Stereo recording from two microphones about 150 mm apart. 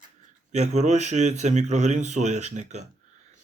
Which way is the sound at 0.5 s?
50° right (ahead or behind).